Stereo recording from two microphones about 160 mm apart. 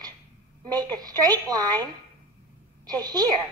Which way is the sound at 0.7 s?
25° right (ahead or behind).